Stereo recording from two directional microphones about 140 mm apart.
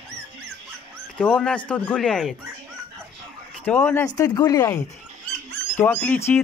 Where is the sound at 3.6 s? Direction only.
15° left (ahead or behind).